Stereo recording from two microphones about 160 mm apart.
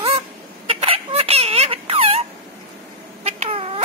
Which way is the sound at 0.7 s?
35° right (ahead or behind).